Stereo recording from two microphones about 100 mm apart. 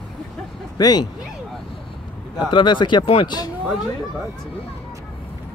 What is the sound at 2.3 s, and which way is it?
Speech, 50° left (ahead or behind).